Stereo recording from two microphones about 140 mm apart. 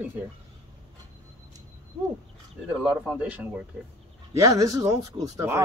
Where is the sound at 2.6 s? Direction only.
5° right (ahead or behind).